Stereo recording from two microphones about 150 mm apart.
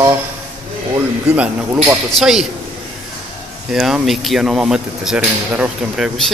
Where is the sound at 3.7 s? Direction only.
Centre (ahead or behind).